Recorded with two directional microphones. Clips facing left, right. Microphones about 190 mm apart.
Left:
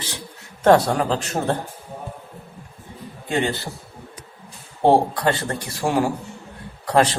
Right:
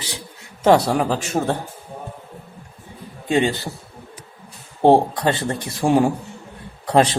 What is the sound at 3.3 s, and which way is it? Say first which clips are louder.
Speech: right 4 dB; 15° right (ahead or behind).